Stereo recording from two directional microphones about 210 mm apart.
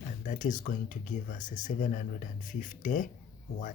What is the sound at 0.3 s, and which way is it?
Speech, 35° left (ahead or behind).